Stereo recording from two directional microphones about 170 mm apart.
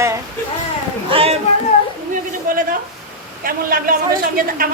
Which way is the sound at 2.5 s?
50° right (ahead or behind).